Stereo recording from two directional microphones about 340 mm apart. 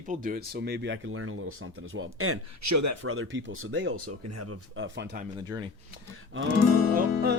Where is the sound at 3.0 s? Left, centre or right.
Right.